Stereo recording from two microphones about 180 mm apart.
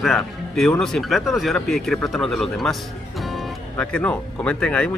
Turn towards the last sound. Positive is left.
turn(degrees=5)  # may be behind; listen again after turning